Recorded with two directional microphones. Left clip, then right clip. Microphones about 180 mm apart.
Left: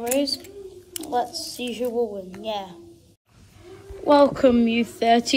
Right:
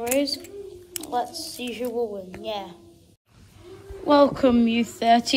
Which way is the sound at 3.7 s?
15° right (ahead or behind).